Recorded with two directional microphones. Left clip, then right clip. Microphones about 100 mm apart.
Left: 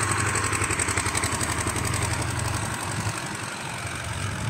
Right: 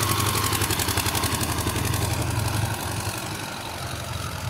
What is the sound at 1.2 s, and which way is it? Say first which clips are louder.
Vehicle: right 1 dB; 55° right (ahead or behind).